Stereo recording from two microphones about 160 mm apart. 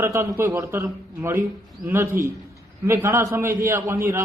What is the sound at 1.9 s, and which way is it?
A man's voice, 15° right (ahead or behind).